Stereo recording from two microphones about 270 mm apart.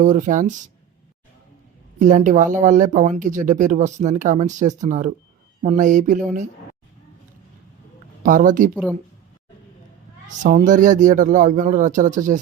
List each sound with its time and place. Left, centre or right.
0.0 s speech: right
2.0 s speech: right
8.2 s speech: right
8.7 s speech: centre
10.4 s speech: right